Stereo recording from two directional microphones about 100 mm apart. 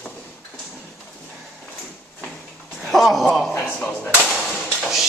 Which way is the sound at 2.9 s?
Centre (ahead or behind).